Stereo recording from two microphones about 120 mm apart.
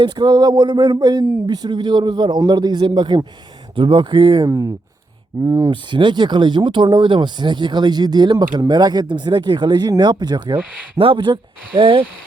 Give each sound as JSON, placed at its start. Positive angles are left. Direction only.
{"t": 0.0, "sound": "speech", "side_deg": -35}
{"t": 4.4, "sound": "speech", "side_deg": -25}
{"t": 5.7, "sound": "speech", "side_deg": -40}